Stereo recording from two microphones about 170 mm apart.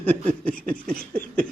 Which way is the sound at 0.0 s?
10° left (ahead or behind).